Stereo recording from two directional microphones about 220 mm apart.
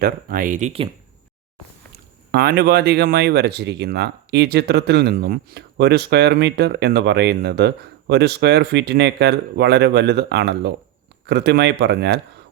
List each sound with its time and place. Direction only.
0.0 s speech: 40° right (ahead or behind)
2.3 s speech: 45° right (ahead or behind)